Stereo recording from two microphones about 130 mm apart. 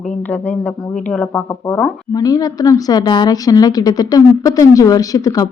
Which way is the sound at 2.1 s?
30° left (ahead or behind).